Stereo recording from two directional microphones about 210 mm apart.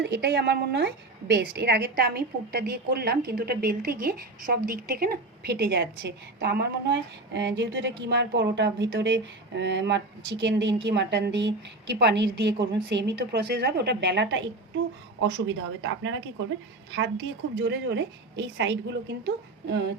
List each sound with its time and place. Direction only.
0.0 s a woman's voice: 50° right (ahead or behind)